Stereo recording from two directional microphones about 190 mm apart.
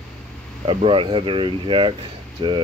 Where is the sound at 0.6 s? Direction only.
30° right (ahead or behind).